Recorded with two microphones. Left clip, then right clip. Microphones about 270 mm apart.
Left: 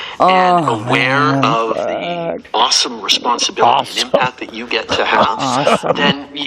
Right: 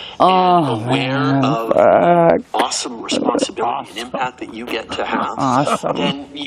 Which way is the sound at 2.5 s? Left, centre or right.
Left.